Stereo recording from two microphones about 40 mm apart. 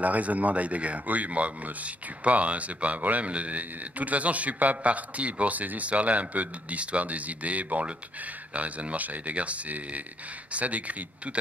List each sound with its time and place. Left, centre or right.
0.0 s speech: right